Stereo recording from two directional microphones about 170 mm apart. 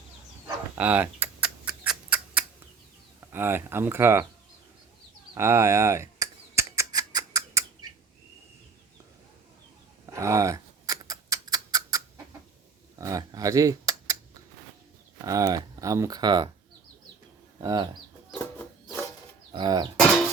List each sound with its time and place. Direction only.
0.4 s a sound: 10° right (ahead or behind)
3.2 s speech: 15° right (ahead or behind)
5.3 s squawk: 15° right (ahead or behind)
10.1 s a sound: 20° right (ahead or behind)
13.0 s computer keyboard: 20° right (ahead or behind)
15.2 s speech: 20° right (ahead or behind)
17.6 s speech: 20° right (ahead or behind)
19.5 s speech: 25° right (ahead or behind)